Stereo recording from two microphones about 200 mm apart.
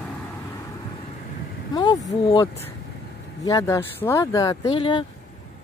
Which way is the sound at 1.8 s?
20° left (ahead or behind).